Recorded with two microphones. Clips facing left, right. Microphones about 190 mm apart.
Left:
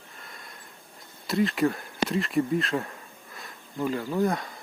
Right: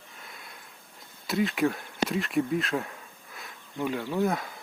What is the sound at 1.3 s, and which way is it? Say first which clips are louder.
Speech: left 2 dB; centre (ahead or behind).